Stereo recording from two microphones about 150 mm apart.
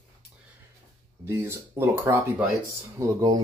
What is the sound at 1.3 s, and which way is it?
Speech, 15° right (ahead or behind).